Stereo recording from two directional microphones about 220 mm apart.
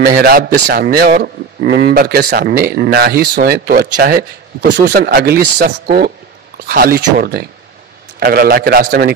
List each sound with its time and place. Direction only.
0.0 s a man's voice: 40° right (ahead or behind)